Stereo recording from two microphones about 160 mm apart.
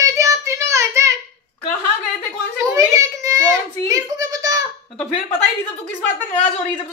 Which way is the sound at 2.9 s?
20° right (ahead or behind).